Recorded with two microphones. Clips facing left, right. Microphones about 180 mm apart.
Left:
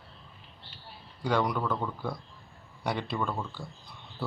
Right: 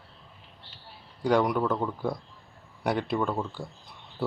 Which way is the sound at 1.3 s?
10° right (ahead or behind).